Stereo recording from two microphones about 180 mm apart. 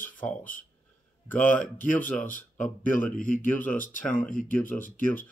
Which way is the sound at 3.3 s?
10° left (ahead or behind).